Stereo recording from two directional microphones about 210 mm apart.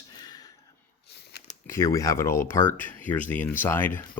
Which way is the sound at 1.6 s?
15° left (ahead or behind).